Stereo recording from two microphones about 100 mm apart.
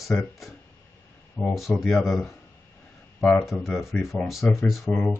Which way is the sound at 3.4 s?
5° right (ahead or behind).